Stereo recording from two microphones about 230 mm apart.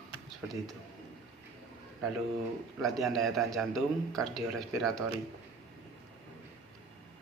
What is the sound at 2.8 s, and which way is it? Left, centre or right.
A man's voice, centre.